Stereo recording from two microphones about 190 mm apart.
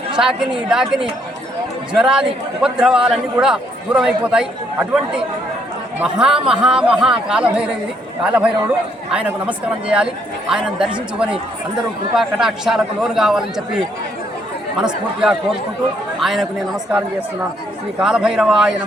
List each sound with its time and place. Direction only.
0.2 s a man's voice: 5° right (ahead or behind)
18.0 s a man's voice: 5° right (ahead or behind)